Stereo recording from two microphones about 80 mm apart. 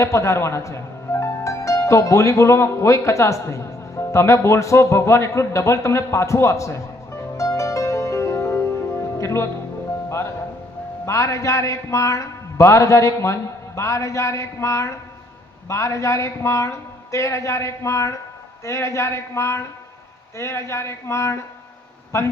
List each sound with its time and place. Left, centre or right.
0.0 s speech: left
7.3 s music: left
11.1 s a man's voice: left